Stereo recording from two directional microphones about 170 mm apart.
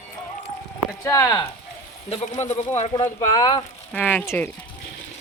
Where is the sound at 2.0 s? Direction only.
40° left (ahead or behind).